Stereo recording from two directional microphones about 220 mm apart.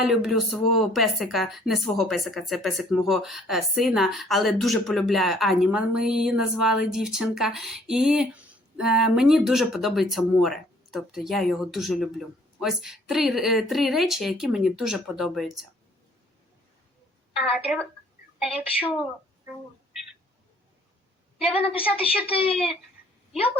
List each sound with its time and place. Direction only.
0.0 s a woman's voice: centre (ahead or behind)
17.3 s a woman's voice: centre (ahead or behind)
21.9 s speech: 25° left (ahead or behind)